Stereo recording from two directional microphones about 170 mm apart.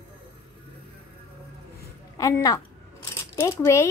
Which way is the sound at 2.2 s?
20° left (ahead or behind).